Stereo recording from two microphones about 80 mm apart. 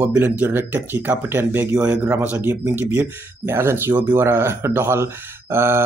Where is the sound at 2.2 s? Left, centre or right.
Right.